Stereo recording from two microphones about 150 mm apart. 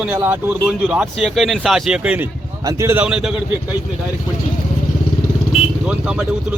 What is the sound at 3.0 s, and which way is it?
Speech, 5° right (ahead or behind).